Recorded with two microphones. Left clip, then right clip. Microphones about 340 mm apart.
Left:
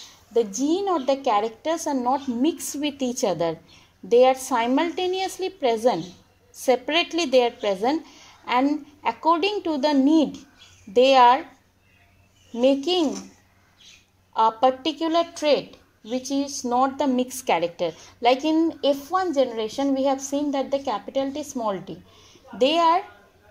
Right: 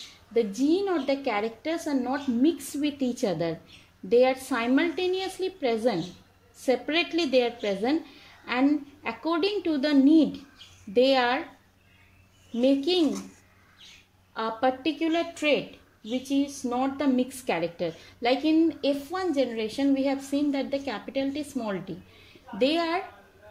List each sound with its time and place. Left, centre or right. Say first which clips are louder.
0.3 s a woman's voice: left 2 dB; left
12.6 s a woman's voice: left 4 dB; left
14.3 s a woman's voice: left 8 dB; left
15.0 s a woman's voice: left 5 dB; left
16.7 s a woman's voice: left 5 dB; left
20.0 s a woman's voice: left 4 dB; centre
22.6 s a woman's voice: left 7 dB; left